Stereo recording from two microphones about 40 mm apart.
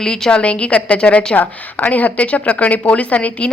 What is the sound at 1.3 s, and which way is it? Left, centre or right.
A woman's voice, left.